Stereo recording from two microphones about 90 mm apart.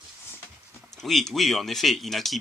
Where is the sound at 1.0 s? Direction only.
5° left (ahead or behind).